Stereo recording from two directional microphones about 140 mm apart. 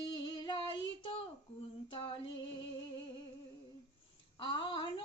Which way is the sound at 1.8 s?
35° left (ahead or behind).